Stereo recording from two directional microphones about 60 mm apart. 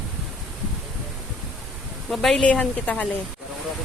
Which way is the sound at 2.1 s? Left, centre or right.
Centre.